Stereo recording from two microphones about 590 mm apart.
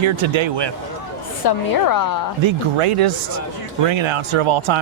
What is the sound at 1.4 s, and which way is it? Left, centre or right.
Speech, left.